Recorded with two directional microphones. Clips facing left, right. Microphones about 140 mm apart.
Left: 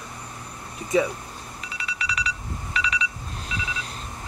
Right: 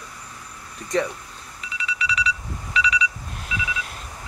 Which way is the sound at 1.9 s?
40° left (ahead or behind).